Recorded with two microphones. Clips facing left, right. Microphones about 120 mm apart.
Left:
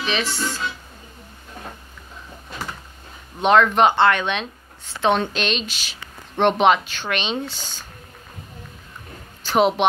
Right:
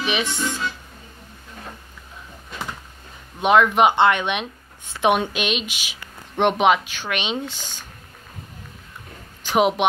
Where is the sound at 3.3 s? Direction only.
10° right (ahead or behind).